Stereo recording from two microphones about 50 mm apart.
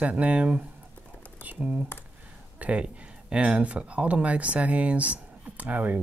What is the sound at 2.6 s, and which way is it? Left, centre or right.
Speech, right.